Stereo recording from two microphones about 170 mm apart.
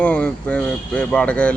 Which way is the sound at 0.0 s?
10° left (ahead or behind).